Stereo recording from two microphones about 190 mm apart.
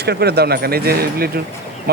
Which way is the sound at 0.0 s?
60° right (ahead or behind).